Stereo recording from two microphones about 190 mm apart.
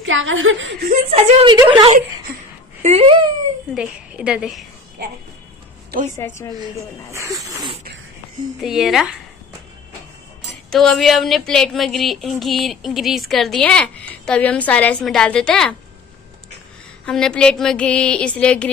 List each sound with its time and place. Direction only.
0.0 s speech: 90° right
1.1 s a woman's voice: 30° right (ahead or behind)
3.7 s a woman's voice: 5° right (ahead or behind)
5.9 s music: 45° right (ahead or behind)
6.6 s speech: 15° right (ahead or behind)
8.5 s a woman's voice: centre (ahead or behind)
10.7 s a woman's voice: centre (ahead or behind)
17.0 s a woman's voice: 5° left (ahead or behind)